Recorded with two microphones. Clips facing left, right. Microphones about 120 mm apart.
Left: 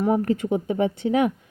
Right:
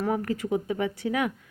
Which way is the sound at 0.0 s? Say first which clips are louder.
Left 6 dB; 25° left (ahead or behind).